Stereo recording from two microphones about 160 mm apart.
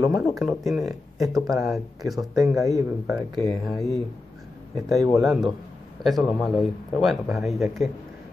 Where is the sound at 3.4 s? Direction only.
Centre (ahead or behind).